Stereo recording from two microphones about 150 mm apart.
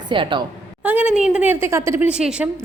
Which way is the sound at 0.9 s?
10° right (ahead or behind).